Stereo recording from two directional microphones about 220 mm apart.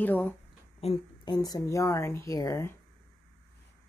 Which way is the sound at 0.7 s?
25° left (ahead or behind).